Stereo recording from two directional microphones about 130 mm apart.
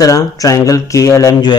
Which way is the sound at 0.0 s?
25° left (ahead or behind).